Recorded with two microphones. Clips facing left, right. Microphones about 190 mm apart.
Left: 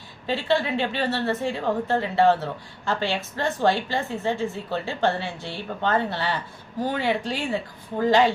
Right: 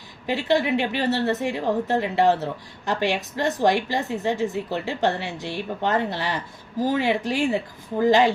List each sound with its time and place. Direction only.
0.3 s a woman's voice: 15° right (ahead or behind)